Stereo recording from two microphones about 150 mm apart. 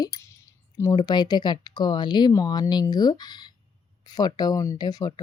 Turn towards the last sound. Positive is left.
turn(degrees=25)  # may be behind; listen again after turning